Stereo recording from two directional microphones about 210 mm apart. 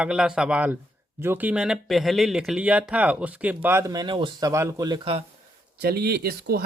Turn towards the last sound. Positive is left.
turn(degrees=-50)  # may be behind; listen again after turning